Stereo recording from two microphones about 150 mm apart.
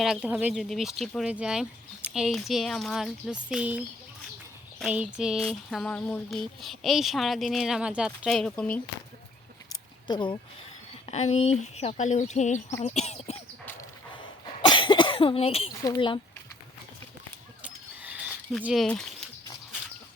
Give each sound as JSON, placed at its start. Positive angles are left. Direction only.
{"t": 0.0, "sound": "speech", "side_deg": -5}
{"t": 9.6, "sound": "a sound", "side_deg": 30}
{"t": 11.0, "sound": "speech", "side_deg": 45}
{"t": 12.8, "sound": "a sound", "side_deg": 45}
{"t": 14.4, "sound": "cough", "side_deg": 30}
{"t": 15.8, "sound": "speech", "side_deg": 30}
{"t": 17.6, "sound": "mechanisms", "side_deg": -10}
{"t": 18.6, "sound": "speech", "side_deg": 0}